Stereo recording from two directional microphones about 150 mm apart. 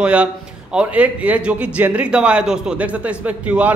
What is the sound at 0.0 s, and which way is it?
A man's voice, 5° right (ahead or behind).